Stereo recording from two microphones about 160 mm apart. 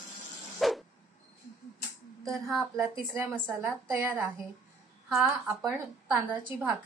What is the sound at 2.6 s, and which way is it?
A woman's voice, 15° right (ahead or behind).